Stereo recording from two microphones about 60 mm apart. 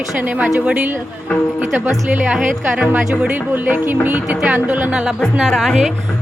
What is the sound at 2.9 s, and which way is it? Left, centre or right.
Speech, right.